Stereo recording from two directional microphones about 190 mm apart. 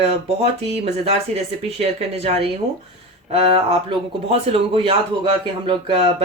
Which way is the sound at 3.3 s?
30° right (ahead or behind).